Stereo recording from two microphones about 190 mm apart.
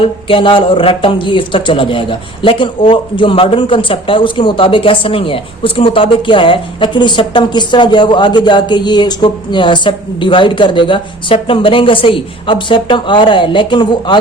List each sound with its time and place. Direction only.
0.3 s a man's voice: 25° left (ahead or behind)